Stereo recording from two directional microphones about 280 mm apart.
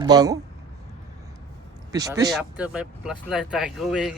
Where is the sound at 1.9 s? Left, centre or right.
Centre.